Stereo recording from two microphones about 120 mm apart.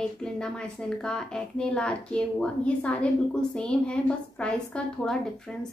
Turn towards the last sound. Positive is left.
turn(degrees=5)  # may be behind; listen again after turning